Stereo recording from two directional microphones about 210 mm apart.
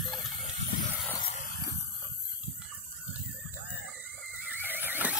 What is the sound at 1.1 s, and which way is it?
Vehicle, 25° left (ahead or behind).